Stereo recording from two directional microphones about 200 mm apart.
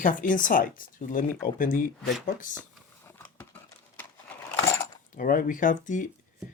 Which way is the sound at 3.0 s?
10° left (ahead or behind).